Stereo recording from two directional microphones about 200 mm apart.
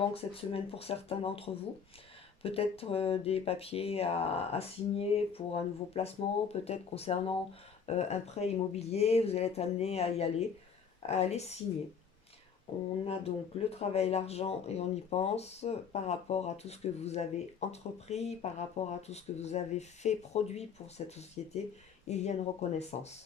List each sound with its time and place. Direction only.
0.1 s speech: 30° left (ahead or behind)
13.1 s speech: 30° left (ahead or behind)